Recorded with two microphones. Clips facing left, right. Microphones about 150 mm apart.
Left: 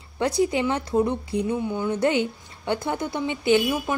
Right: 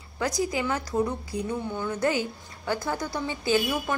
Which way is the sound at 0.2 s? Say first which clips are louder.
Left 5 dB; 25° left (ahead or behind).